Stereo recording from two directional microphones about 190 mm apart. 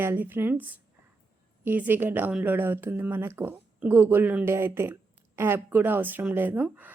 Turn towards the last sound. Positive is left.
turn(degrees=-10)  # may be behind; listen again after turning